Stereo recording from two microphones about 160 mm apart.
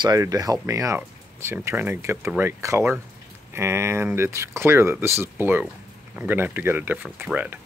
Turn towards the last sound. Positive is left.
turn(degrees=-10)  # may be behind; listen again after turning